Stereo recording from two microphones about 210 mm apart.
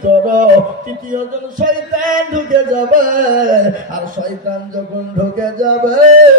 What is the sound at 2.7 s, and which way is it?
Music, 40° right (ahead or behind).